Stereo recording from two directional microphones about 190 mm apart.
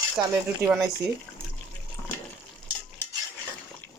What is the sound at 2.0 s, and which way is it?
Water, 15° left (ahead or behind).